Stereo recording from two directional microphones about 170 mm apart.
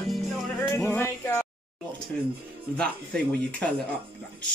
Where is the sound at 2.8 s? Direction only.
5° left (ahead or behind).